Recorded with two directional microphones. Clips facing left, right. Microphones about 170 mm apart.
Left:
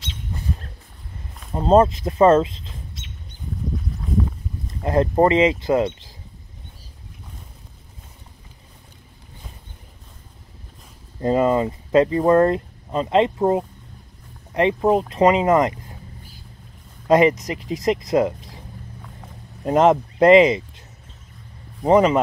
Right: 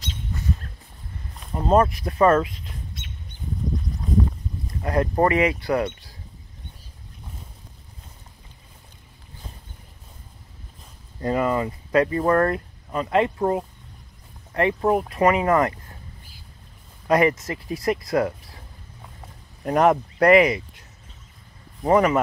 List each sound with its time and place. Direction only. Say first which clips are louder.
1.5 s speech: left 4 dB; 25° left (ahead or behind)
4.8 s speech: left 4 dB; 25° left (ahead or behind)
11.1 s speech: left 4 dB; 25° left (ahead or behind)
17.1 s speech: left 4 dB; 20° left (ahead or behind)
19.6 s speech: left 3 dB; 20° left (ahead or behind)
21.8 s speech: left 3 dB; 20° left (ahead or behind)